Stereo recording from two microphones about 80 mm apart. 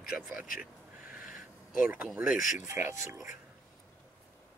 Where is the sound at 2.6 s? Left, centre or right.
Right.